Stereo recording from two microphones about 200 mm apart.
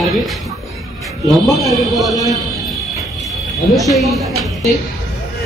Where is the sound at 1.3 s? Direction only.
Centre (ahead or behind).